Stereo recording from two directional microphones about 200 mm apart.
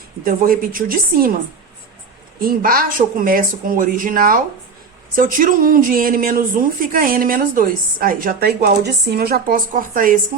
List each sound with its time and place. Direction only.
0.3 s speech: 45° right (ahead or behind)
2.4 s speech: 45° right (ahead or behind)